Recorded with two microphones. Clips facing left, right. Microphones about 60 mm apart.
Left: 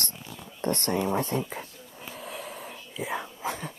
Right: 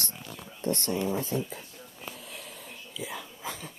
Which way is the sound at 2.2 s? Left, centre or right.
Left.